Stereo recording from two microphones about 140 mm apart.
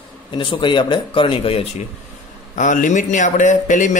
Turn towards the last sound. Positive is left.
turn(degrees=65)  # may be behind; listen again after turning